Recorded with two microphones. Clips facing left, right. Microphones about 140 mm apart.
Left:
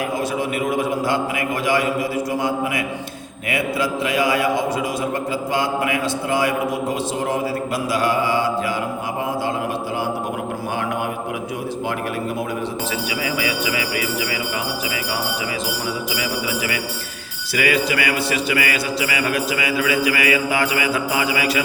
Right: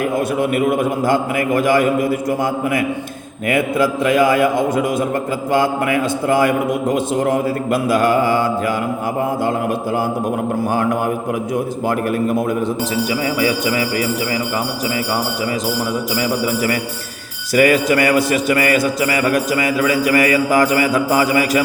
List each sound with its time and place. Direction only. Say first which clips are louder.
0.3 s a man's voice: right 6 dB; 55° right (ahead or behind)
13.4 s jingle bell: right 6 dB; 40° right (ahead or behind)
17.5 s a man's voice: right 7 dB; 45° right (ahead or behind)